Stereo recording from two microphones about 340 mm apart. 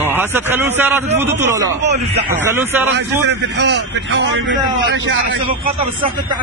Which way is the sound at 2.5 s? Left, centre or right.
Centre.